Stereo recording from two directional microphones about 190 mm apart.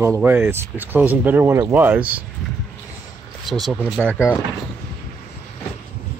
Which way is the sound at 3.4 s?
Centre (ahead or behind).